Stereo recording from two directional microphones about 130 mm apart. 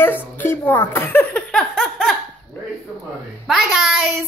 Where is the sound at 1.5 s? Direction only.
5° left (ahead or behind).